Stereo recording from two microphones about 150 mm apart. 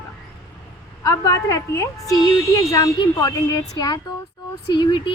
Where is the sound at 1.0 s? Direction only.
20° left (ahead or behind).